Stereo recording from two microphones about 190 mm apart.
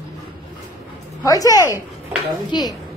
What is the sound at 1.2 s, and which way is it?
Speech, 20° left (ahead or behind).